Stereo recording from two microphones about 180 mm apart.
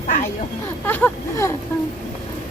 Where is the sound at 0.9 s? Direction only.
10° left (ahead or behind).